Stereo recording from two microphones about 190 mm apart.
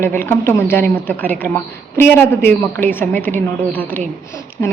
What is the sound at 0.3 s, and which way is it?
A woman's voice, 10° left (ahead or behind).